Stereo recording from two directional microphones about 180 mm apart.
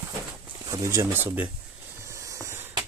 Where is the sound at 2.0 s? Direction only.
15° right (ahead or behind).